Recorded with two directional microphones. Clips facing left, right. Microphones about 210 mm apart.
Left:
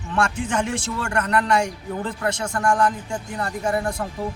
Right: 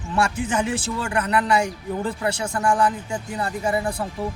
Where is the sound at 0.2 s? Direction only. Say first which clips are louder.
Even; 5° right (ahead or behind).